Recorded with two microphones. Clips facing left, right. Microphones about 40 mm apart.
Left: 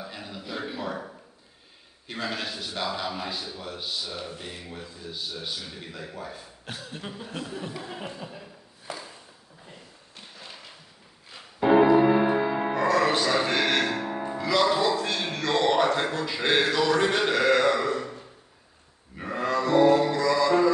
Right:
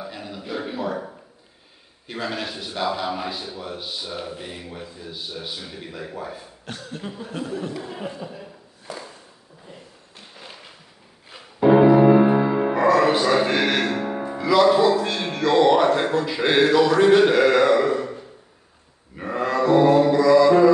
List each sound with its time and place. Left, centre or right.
0.1 s a sound: centre
0.7 s a man's voice: centre
2.0 s cough: centre
2.5 s a man's voice: centre
6.6 s cough: centre
11.6 s music: centre